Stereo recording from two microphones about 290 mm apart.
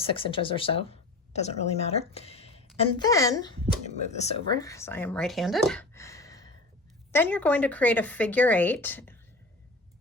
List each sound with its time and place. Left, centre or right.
0.0 s a woman's voice: centre
4.6 s speech: centre